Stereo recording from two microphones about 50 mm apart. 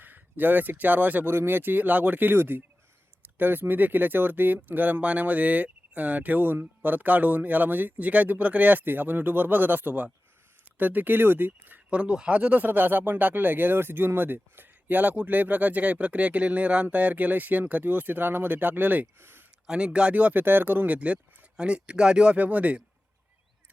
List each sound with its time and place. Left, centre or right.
0.0 s speech: right
1.3 s speech: right
2.3 s speech: right
11.9 s speech: right
19.6 s speech: centre
20.4 s speech: right
21.5 s speech: centre